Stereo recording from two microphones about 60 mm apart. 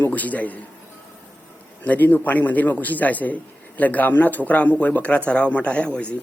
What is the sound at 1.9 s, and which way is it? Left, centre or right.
A man's voice, left.